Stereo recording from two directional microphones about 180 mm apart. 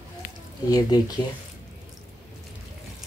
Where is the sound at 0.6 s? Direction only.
20° left (ahead or behind).